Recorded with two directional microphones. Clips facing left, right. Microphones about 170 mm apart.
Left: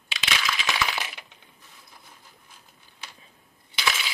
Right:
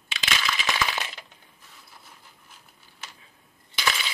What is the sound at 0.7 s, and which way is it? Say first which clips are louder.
Coin: right 1 dB; 5° left (ahead or behind).